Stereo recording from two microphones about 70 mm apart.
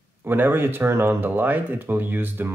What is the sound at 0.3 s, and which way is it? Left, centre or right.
Speech, right.